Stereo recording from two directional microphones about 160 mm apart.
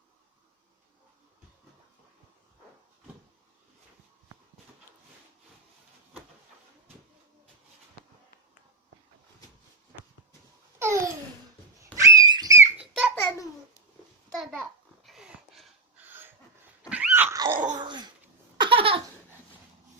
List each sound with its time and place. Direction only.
10.8 s babbling: 15° right (ahead or behind)
11.9 s a sound: 20° right (ahead or behind)
12.8 s a sound: 5° right (ahead or behind)
14.3 s babbling: centre (ahead or behind)
16.0 s dog: 15° right (ahead or behind)
17.7 s babbling: 30° right (ahead or behind)
18.5 s laughter: 30° right (ahead or behind)